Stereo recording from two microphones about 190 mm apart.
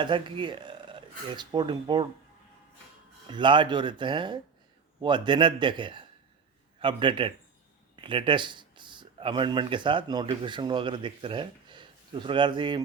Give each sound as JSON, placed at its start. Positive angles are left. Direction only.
{"t": 0.0, "sound": "speech", "side_deg": -25}
{"t": 3.2, "sound": "a man's voice", "side_deg": -25}